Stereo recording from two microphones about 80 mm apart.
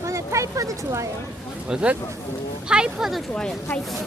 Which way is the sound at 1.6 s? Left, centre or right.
Centre.